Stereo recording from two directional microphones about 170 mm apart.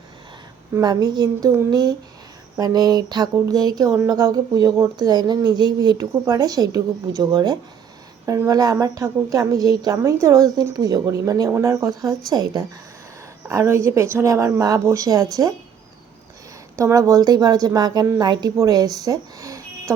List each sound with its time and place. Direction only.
0.7 s a woman's voice: 20° right (ahead or behind)
16.7 s speech: 20° right (ahead or behind)